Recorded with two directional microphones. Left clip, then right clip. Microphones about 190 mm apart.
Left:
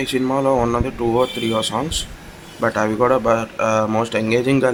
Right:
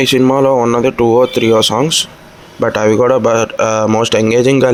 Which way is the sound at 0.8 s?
40° right (ahead or behind).